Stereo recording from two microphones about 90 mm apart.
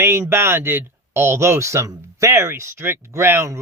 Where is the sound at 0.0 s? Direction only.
30° right (ahead or behind).